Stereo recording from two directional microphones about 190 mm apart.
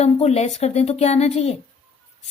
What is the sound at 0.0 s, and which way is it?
Speech, 35° left (ahead or behind).